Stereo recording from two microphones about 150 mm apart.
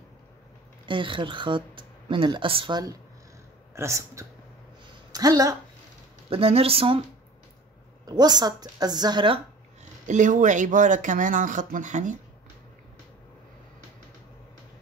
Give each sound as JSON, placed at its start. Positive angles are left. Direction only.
{"t": 0.8, "sound": "a woman's voice", "side_deg": -35}
{"t": 6.3, "sound": "speech", "side_deg": -40}
{"t": 8.1, "sound": "a woman's voice", "side_deg": -25}
{"t": 10.0, "sound": "speech", "side_deg": -55}